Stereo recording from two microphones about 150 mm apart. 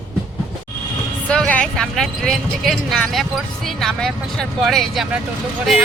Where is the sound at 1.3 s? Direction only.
10° left (ahead or behind).